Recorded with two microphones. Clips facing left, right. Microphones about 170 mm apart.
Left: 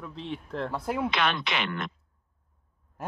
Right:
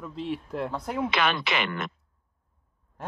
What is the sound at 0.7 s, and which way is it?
Speech, 5° left (ahead or behind).